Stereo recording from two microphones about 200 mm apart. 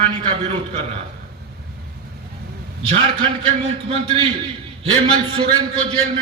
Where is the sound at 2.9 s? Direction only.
30° right (ahead or behind).